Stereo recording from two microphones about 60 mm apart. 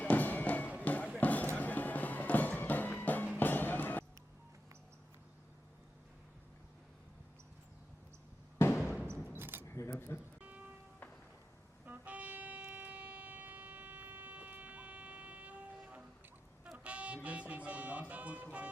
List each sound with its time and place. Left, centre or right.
0.0 s music: left
0.8 s a sound: left
1.2 s music: left
8.5 s a sound: left
9.3 s a sound: right
9.6 s camera: left
9.9 s music: left
11.9 s music: right
16.7 s music: right